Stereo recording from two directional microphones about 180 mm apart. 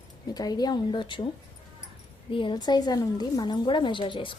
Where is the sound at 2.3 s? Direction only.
25° left (ahead or behind).